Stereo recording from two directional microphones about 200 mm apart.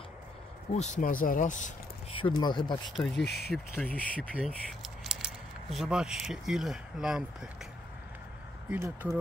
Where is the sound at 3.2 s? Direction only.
55° left (ahead or behind).